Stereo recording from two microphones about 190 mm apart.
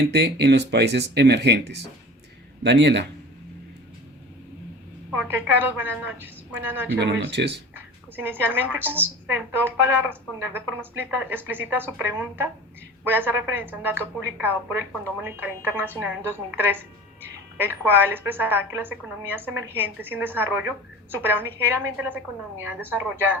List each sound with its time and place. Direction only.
0.0 s speech: 60° right (ahead or behind)
5.1 s a woman's voice: 10° right (ahead or behind)
7.0 s speech: 65° right (ahead or behind)
8.1 s a woman's voice: 10° right (ahead or behind)